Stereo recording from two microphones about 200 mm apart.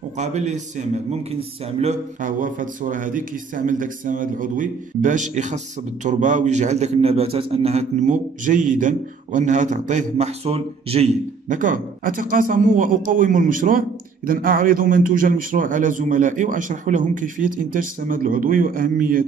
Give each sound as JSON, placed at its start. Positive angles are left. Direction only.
{"t": 0.2, "sound": "a man's voice", "side_deg": -35}